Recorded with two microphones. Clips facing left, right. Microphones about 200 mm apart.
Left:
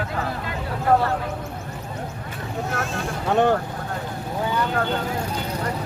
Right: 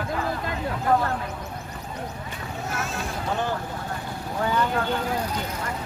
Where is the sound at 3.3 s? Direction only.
65° left (ahead or behind).